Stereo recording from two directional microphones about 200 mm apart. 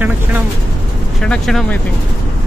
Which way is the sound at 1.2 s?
Centre (ahead or behind).